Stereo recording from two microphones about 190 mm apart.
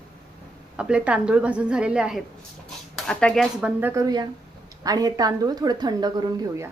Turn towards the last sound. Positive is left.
turn(degrees=-20)  # may be behind; listen again after turning